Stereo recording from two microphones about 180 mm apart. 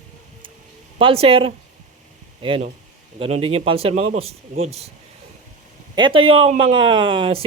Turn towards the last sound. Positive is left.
turn(degrees=-30)  # may be behind; listen again after turning